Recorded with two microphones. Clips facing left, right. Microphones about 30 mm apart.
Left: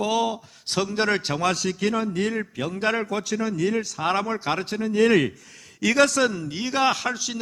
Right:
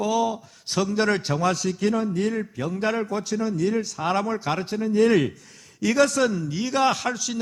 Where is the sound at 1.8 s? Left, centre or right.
Left.